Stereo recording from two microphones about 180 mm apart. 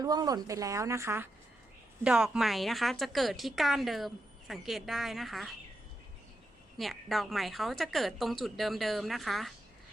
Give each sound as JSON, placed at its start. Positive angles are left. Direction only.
{"t": 0.0, "sound": "a woman's voice", "side_deg": -20}
{"t": 6.7, "sound": "speech", "side_deg": 0}